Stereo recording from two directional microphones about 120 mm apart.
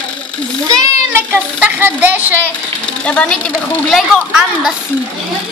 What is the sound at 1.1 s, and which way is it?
A woman's voice, 15° right (ahead or behind).